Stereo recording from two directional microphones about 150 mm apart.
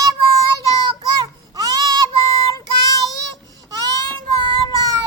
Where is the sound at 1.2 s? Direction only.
25° right (ahead or behind).